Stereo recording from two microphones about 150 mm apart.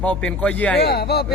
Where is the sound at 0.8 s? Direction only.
90° left.